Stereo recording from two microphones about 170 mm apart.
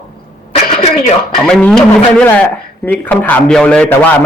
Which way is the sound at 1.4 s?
5° left (ahead or behind).